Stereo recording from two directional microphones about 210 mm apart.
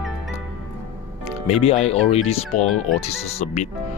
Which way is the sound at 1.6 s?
30° left (ahead or behind).